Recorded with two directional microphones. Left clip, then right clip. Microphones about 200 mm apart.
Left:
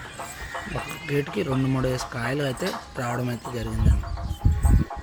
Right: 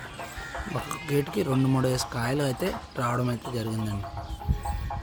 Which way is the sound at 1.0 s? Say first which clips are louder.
Left 1 dB; 15° right (ahead or behind).